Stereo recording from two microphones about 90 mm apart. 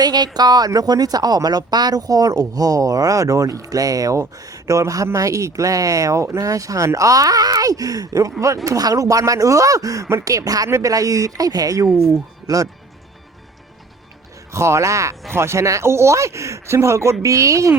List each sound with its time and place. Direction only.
0.0 s speech: 50° right (ahead or behind)
11.9 s speech: centre (ahead or behind)
12.5 s speech: 45° right (ahead or behind)
14.5 s speech: 30° right (ahead or behind)